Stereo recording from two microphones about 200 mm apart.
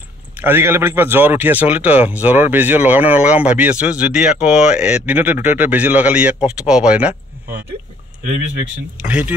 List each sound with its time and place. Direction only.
0.4 s speech: 10° right (ahead or behind)
8.9 s speech: 5° right (ahead or behind)